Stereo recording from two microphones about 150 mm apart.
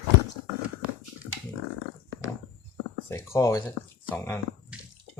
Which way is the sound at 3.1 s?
20° left (ahead or behind).